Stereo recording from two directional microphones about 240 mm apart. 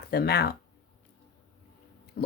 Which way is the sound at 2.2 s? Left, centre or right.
Left.